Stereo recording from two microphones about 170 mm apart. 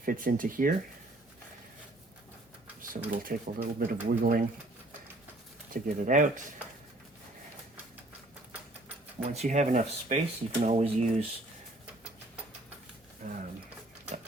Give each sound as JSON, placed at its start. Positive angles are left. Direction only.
{"t": 0.0, "sound": "speech", "side_deg": -55}
{"t": 3.1, "sound": "speech", "side_deg": -55}
{"t": 5.7, "sound": "speech", "side_deg": -50}
{"t": 9.3, "sound": "speech", "side_deg": -40}
{"t": 13.2, "sound": "speech", "side_deg": -45}